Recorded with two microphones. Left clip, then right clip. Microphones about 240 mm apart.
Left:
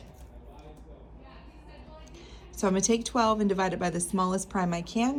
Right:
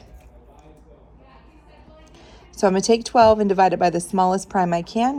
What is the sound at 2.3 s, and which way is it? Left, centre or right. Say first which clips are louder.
A woman's voice: right 9 dB; centre.